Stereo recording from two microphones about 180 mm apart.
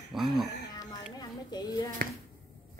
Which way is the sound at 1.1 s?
20° left (ahead or behind).